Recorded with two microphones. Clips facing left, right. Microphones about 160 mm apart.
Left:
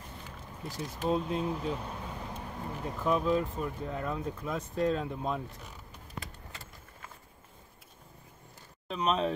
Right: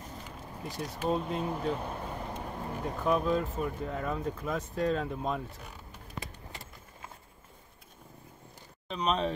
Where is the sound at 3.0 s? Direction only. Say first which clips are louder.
Even; centre (ahead or behind).